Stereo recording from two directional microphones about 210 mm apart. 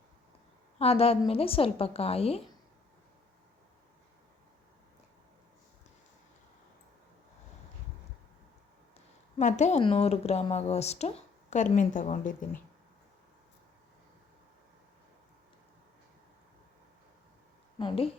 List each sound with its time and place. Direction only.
0.8 s a woman's voice: 30° left (ahead or behind)
9.4 s speech: 35° left (ahead or behind)
17.7 s a woman's voice: 25° left (ahead or behind)